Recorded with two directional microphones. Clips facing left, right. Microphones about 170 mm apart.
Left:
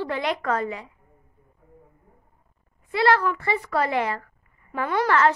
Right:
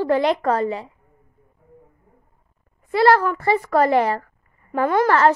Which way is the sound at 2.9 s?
40° right (ahead or behind).